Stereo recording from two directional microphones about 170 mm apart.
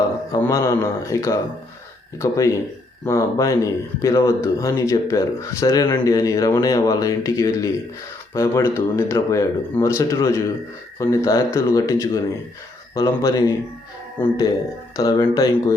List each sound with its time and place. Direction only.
0.3 s speech: 15° left (ahead or behind)
14.9 s speech: 20° left (ahead or behind)